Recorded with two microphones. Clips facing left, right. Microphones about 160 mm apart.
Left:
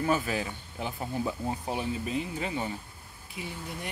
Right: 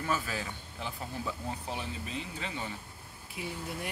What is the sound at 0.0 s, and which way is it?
Speech, 25° left (ahead or behind).